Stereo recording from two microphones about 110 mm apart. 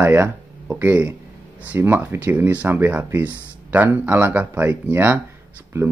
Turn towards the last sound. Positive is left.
turn(degrees=-20)  # may be behind; listen again after turning